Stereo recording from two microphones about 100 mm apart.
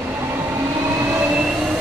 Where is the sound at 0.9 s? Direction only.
25° right (ahead or behind).